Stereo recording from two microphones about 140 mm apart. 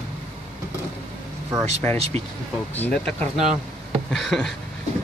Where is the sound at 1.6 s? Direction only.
50° right (ahead or behind).